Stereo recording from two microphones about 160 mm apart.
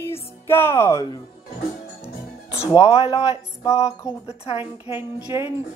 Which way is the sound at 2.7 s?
40° left (ahead or behind).